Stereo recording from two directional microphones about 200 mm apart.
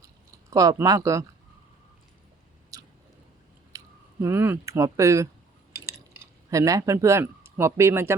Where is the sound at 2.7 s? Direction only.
15° right (ahead or behind).